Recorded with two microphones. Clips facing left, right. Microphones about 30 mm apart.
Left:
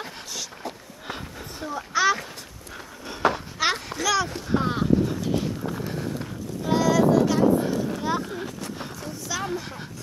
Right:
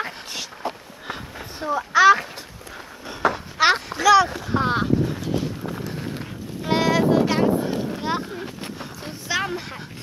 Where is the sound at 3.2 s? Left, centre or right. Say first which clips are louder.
Right 1 dB; centre.